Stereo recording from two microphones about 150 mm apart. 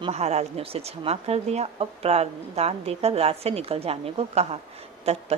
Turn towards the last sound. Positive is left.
turn(degrees=-45)  # may be behind; listen again after turning